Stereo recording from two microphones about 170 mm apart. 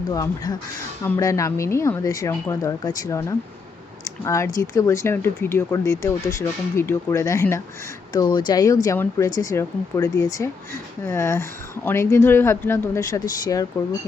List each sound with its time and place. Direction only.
0.1 s speech: 20° left (ahead or behind)